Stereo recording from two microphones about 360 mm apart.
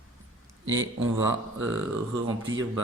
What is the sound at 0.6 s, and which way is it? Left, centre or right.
Speech, right.